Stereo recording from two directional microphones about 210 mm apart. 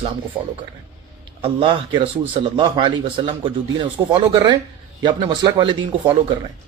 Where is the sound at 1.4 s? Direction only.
25° right (ahead or behind).